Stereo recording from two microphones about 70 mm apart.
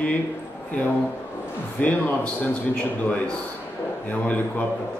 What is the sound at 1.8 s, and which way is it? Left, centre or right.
Speech, left.